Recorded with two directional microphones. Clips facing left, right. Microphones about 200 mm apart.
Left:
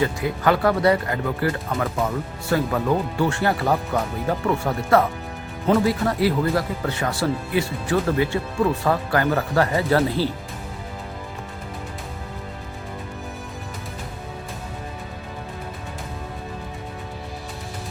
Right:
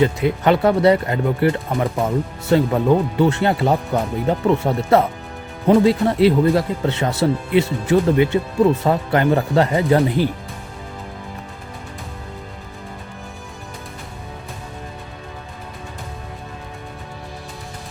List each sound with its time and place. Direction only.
0.0 s speech: 20° right (ahead or behind)